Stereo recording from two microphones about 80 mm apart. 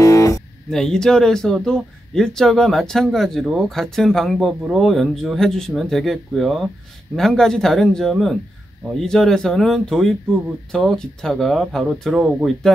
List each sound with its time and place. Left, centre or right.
0.0 s guitar: left
0.7 s speech: centre